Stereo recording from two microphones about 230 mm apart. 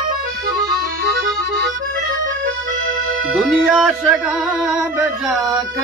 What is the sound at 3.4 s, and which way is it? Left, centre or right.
Music, centre.